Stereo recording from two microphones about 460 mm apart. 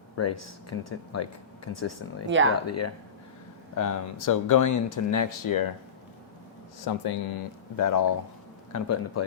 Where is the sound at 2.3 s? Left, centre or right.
Right.